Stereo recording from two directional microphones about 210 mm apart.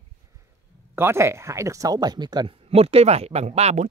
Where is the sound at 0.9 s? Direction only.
10° right (ahead or behind).